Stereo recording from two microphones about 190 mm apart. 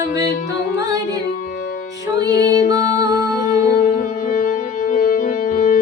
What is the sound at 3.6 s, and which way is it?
Music, 40° left (ahead or behind).